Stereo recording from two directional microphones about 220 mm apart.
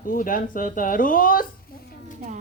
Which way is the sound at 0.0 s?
40° left (ahead or behind).